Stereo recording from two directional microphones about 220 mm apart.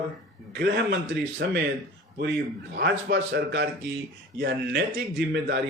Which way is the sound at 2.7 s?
50° right (ahead or behind).